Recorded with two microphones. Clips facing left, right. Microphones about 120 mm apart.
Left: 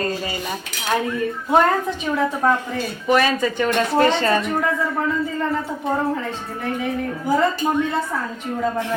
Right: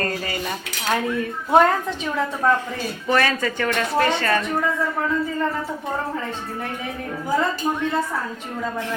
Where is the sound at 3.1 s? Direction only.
15° left (ahead or behind).